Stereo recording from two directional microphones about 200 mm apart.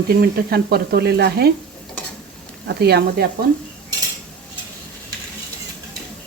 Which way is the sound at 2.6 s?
55° right (ahead or behind).